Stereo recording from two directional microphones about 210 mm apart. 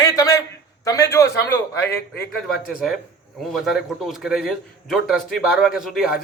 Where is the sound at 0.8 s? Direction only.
15° left (ahead or behind).